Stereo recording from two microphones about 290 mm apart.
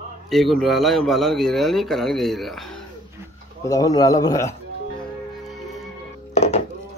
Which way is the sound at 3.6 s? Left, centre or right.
Centre.